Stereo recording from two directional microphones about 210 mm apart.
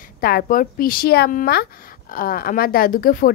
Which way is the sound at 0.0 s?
45° left (ahead or behind).